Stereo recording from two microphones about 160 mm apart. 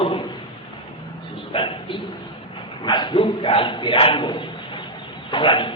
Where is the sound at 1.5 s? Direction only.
35° left (ahead or behind).